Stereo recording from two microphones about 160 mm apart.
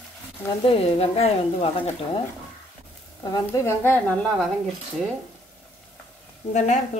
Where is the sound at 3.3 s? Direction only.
20° left (ahead or behind).